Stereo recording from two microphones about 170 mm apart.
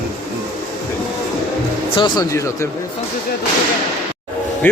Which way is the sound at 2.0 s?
25° left (ahead or behind).